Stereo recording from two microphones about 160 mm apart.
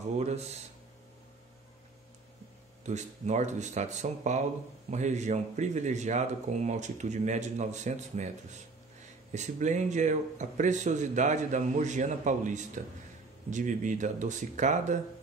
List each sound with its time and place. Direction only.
0.2 s a man's voice: 45° right (ahead or behind)
2.8 s a man's voice: 45° right (ahead or behind)
9.3 s a man's voice: 45° right (ahead or behind)